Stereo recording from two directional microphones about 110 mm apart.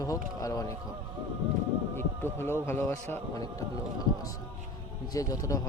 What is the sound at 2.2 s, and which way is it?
Speech, 20° left (ahead or behind).